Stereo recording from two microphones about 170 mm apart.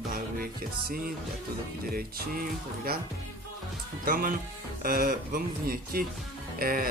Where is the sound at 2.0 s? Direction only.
60° right (ahead or behind).